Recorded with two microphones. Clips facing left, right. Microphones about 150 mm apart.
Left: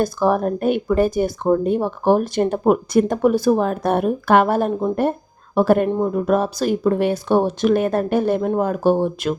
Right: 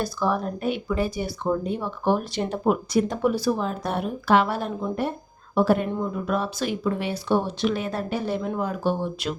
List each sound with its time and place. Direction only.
0.0 s speech: 50° left (ahead or behind)